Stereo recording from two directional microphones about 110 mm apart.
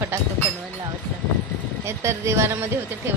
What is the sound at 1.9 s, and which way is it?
Speech, 25° right (ahead or behind).